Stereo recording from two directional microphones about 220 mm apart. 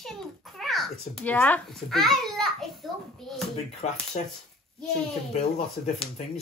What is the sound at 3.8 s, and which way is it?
Speech, 30° left (ahead or behind).